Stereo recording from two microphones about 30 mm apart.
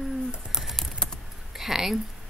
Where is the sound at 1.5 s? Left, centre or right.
Centre.